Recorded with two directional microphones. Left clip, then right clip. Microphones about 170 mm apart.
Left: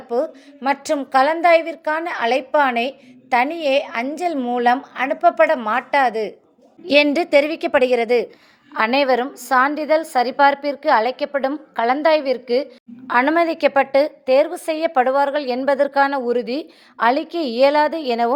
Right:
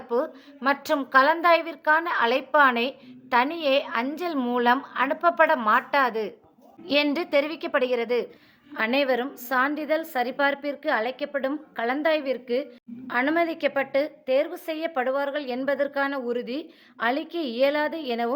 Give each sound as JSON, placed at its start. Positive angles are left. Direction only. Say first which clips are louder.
{"t": 0.1, "sound": "a woman's voice", "louder": "left 5 dB", "side_deg": 15}
{"t": 8.7, "sound": "a woman's voice", "louder": "left 7 dB", "side_deg": 15}